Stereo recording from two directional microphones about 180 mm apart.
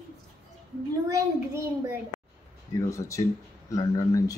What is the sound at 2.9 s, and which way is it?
Speech, 15° left (ahead or behind).